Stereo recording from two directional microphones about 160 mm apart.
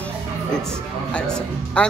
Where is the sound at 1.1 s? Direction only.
5° left (ahead or behind).